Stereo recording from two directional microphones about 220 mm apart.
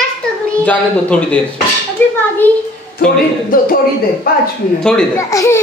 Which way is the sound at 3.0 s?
40° left (ahead or behind).